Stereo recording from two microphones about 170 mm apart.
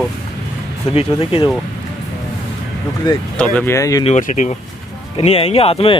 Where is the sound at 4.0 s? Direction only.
45° left (ahead or behind).